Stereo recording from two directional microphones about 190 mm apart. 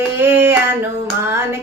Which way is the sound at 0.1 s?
10° right (ahead or behind).